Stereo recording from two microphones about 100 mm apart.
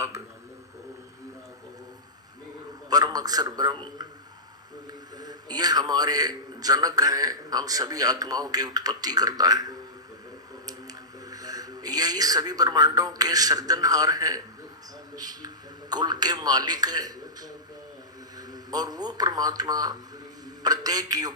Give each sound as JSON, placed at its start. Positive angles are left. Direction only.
{"t": 2.9, "sound": "a man's voice", "side_deg": -40}